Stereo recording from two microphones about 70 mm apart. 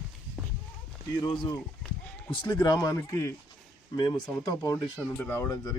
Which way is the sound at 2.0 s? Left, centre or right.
Centre.